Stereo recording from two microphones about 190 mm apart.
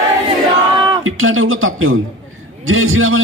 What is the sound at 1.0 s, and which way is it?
A man's voice, 90° right.